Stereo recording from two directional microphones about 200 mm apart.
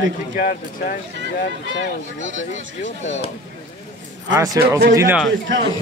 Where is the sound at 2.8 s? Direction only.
35° left (ahead or behind).